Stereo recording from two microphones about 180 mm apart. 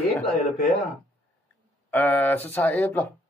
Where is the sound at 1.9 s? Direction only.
10° left (ahead or behind).